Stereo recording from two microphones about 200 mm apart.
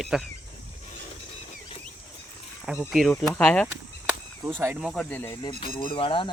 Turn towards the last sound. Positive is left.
turn(degrees=25)  # may be behind; listen again after turning